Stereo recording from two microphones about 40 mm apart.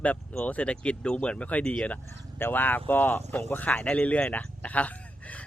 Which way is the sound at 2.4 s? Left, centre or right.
Left.